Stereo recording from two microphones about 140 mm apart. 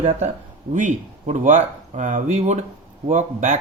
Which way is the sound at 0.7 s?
65° right (ahead or behind).